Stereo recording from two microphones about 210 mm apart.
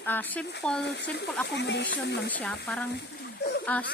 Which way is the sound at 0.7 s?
55° left (ahead or behind).